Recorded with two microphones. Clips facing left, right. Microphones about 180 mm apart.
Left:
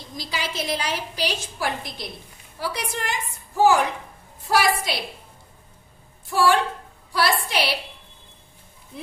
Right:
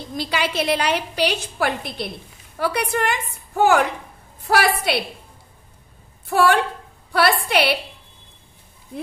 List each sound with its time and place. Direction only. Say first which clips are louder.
0.1 s a woman's voice: right 7 dB; 65° right (ahead or behind)
6.2 s a woman's voice: right 2 dB; 60° right (ahead or behind)